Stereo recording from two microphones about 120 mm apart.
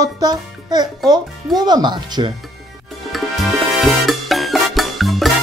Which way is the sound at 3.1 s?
Centre (ahead or behind).